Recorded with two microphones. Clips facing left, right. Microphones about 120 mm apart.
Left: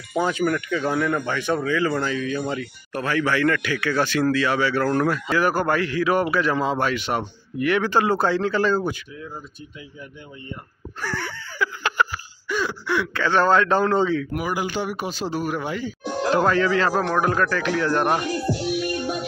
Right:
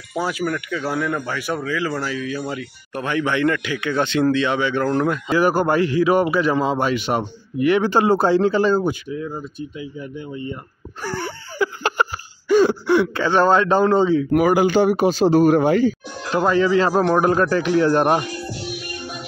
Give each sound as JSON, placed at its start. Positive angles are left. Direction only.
{"t": 0.1, "sound": "speech", "side_deg": -5}
{"t": 2.9, "sound": "speech", "side_deg": -20}
{"t": 11.0, "sound": "a sound", "side_deg": -30}
{"t": 13.4, "sound": "speech", "side_deg": -25}
{"t": 14.3, "sound": "speech", "side_deg": -75}
{"t": 14.8, "sound": "speech", "side_deg": -30}
{"t": 15.6, "sound": "speech", "side_deg": -70}
{"t": 16.3, "sound": "speech", "side_deg": -15}